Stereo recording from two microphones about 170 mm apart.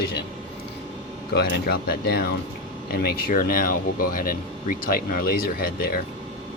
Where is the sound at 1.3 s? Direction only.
70° left (ahead or behind).